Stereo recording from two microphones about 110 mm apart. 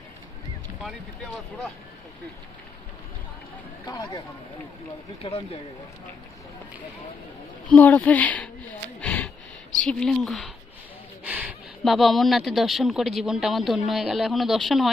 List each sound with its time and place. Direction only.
3.8 s speech: 35° left (ahead or behind)
5.2 s speech: 65° left (ahead or behind)
7.7 s speech: 15° left (ahead or behind)
9.0 s a sound: 10° left (ahead or behind)
9.8 s speech: 5° left (ahead or behind)
11.3 s a sound: 15° right (ahead or behind)
11.9 s speech: centre (ahead or behind)